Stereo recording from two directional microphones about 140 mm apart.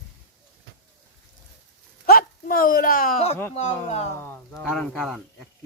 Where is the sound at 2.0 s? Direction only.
90° left.